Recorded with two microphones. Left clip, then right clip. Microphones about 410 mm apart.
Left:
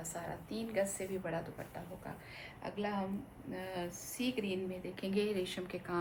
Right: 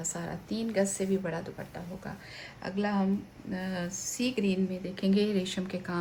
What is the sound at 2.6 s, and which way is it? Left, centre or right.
Speech, right.